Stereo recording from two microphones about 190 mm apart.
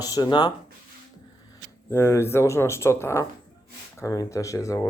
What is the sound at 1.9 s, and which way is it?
Speech, 15° left (ahead or behind).